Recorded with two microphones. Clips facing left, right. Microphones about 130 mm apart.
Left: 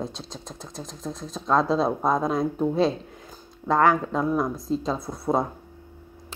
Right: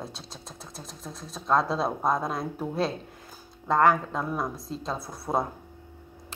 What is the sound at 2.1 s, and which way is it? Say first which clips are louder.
Speech: left 2 dB; 50° left (ahead or behind).